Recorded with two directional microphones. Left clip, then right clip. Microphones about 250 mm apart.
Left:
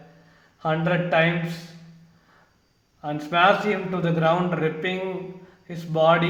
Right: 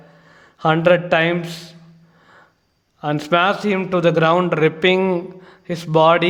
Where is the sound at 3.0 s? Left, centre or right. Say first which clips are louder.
Right 4 dB; right.